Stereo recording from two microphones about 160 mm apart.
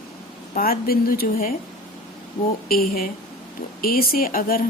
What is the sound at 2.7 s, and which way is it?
Speech, 65° left (ahead or behind).